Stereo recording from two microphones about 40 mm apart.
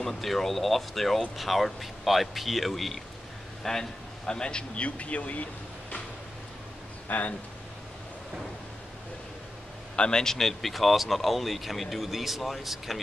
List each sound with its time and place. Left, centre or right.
0.2 s speech: centre
4.3 s speech: left
7.1 s speech: left
9.9 s a man's voice: left
10.2 s speech: centre